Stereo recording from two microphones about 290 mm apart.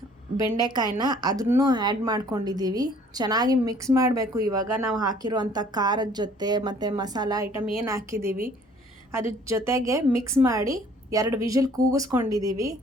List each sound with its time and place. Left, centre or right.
0.3 s a woman's voice: centre
8.2 s a woman's voice: right
9.5 s a woman's voice: centre